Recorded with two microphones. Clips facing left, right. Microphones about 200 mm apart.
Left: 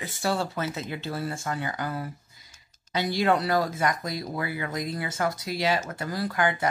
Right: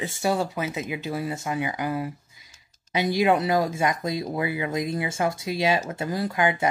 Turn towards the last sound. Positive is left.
turn(degrees=-20)  # may be behind; listen again after turning